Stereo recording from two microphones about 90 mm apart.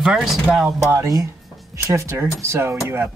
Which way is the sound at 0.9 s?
35° right (ahead or behind).